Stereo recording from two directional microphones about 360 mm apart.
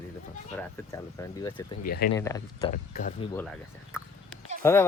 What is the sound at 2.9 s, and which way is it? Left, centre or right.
Speech, left.